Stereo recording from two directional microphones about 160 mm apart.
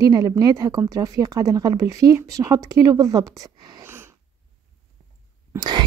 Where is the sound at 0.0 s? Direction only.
25° right (ahead or behind).